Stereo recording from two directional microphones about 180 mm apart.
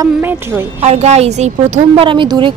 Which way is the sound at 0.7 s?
40° right (ahead or behind).